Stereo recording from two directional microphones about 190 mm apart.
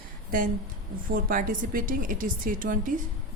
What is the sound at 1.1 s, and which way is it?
A woman's voice, 45° right (ahead or behind).